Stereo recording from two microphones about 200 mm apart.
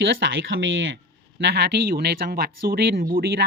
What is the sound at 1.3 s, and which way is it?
Speech, 60° right (ahead or behind).